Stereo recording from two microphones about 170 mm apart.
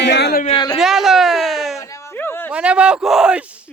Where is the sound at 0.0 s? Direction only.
85° left.